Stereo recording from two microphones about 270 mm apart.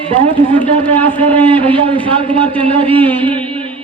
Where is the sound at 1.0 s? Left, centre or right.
Centre.